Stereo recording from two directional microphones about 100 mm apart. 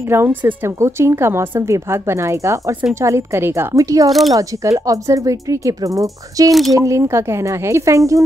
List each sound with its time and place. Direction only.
0.1 s a woman's voice: 20° right (ahead or behind)